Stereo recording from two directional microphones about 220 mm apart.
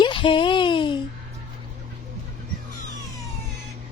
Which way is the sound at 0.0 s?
20° left (ahead or behind).